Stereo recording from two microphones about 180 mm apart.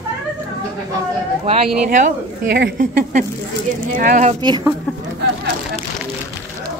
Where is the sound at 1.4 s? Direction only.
35° right (ahead or behind).